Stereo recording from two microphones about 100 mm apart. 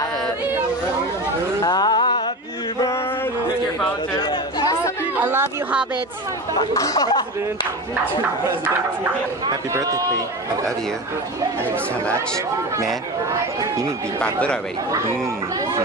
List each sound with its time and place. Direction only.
1.6 s a sound: 40° left (ahead or behind)
4.3 s chatter: 45° left (ahead or behind)
5.2 s speech: 20° right (ahead or behind)
6.5 s speech: 35° left (ahead or behind)
8.0 s speech: 20° right (ahead or behind)
13.6 s speech: 30° right (ahead or behind)
14.2 s speech: 10° left (ahead or behind)
14.9 s speech: 30° right (ahead or behind)